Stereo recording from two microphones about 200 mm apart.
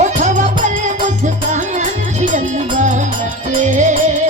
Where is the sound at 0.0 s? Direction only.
35° right (ahead or behind).